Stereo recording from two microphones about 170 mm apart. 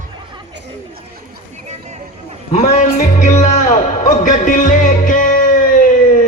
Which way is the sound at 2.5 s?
40° left (ahead or behind).